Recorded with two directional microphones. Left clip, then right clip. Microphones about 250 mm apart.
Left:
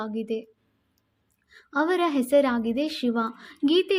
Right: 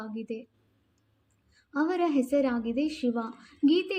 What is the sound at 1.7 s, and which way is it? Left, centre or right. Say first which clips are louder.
A woman's voice: left 4 dB; left.